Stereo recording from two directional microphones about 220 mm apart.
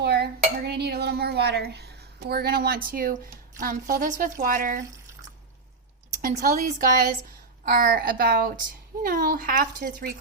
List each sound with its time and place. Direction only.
0.0 s a sound: 50° right (ahead or behind)
0.7 s a woman's voice: 45° right (ahead or behind)
6.2 s speech: 40° right (ahead or behind)